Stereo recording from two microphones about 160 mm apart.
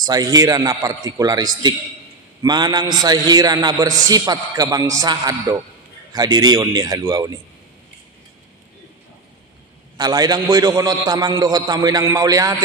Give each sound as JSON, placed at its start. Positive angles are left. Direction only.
{"t": 0.0, "sound": "a man's voice", "side_deg": -25}
{"t": 9.9, "sound": "a man's voice", "side_deg": -25}